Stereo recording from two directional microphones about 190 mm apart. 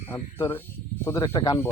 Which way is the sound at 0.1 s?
15° left (ahead or behind).